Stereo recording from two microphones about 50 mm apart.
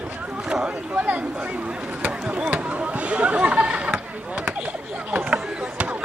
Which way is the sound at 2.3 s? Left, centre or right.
Right.